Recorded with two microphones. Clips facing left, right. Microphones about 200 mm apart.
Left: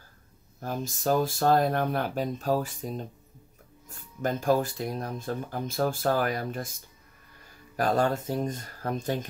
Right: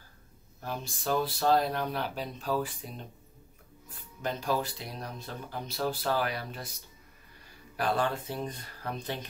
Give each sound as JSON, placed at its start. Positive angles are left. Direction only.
{"t": 0.6, "sound": "speech", "side_deg": 45}